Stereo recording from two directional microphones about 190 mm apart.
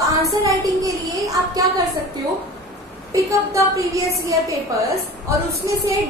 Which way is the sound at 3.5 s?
15° right (ahead or behind).